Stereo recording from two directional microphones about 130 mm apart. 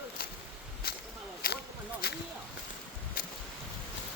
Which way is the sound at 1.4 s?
90° left.